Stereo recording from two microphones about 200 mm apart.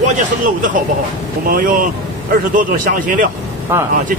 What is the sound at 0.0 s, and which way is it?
A man's voice, 40° right (ahead or behind).